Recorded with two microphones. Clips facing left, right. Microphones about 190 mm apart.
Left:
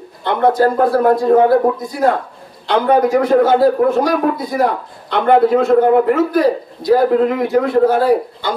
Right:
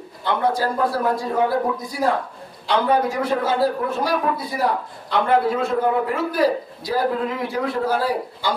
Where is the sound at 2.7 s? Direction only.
60° left (ahead or behind).